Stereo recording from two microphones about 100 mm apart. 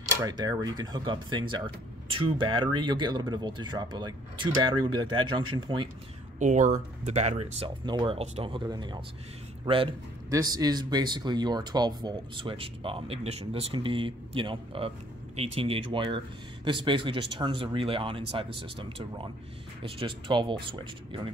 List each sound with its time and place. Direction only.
0.2 s speech: 40° right (ahead or behind)
7.1 s speech: 90° right
7.8 s speech: 50° right (ahead or behind)
8.2 s speech: 90° right
8.5 s speech: 50° right (ahead or behind)
9.7 s speech: 60° right (ahead or behind)
10.3 s speech: 40° right (ahead or behind); by 13.7 s 75° right (ahead or behind)
13.7 s speech: 60° right (ahead or behind)
15.3 s speech: 80° right; by 21.3 s 55° right (ahead or behind)